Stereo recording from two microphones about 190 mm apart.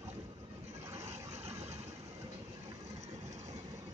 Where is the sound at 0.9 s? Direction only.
35° right (ahead or behind).